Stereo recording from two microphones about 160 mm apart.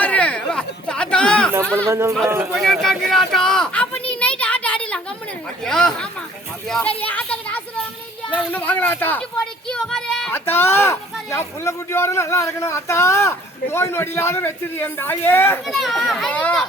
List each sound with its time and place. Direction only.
0.0 s chatter: 10° left (ahead or behind)
1.9 s speech: 20° right (ahead or behind)
2.6 s speech: centre (ahead or behind)
4.1 s a sound: 10° left (ahead or behind)
5.6 s speech: 5° left (ahead or behind)
10.3 s speech: 15° left (ahead or behind)
15.6 s speech: centre (ahead or behind)